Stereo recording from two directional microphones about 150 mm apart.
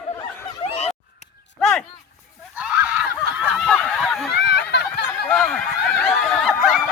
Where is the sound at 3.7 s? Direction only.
5° left (ahead or behind).